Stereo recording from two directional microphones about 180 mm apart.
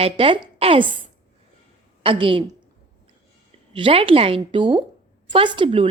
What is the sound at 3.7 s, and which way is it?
A woman's voice, 30° right (ahead or behind).